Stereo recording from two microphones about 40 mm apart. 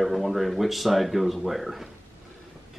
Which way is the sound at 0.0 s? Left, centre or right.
Centre.